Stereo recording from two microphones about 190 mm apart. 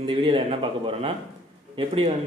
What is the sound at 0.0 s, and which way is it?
Speech, 30° right (ahead or behind).